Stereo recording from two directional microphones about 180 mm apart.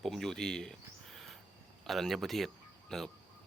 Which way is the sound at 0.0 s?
Centre (ahead or behind).